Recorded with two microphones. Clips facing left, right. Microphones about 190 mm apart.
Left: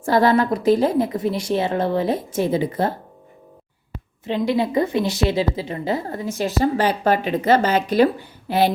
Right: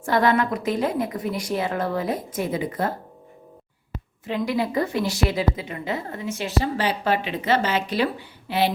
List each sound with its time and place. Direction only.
0.0 s a woman's voice: 35° left (ahead or behind)
4.3 s a woman's voice: 25° left (ahead or behind); by 8.7 s 45° left (ahead or behind)